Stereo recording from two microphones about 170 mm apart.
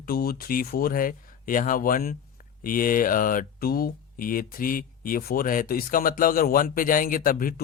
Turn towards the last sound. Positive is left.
turn(degrees=55)  # may be behind; listen again after turning